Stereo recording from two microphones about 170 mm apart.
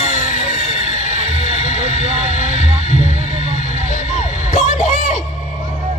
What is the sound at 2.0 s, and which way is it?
Vehicle, 40° right (ahead or behind).